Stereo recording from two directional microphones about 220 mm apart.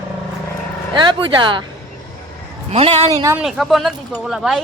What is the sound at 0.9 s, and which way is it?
Speech, 20° right (ahead or behind).